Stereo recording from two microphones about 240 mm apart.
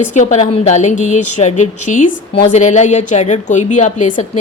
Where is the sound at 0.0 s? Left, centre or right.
Left.